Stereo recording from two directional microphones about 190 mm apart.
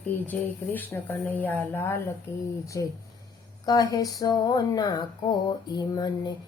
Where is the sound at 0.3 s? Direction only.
10° left (ahead or behind).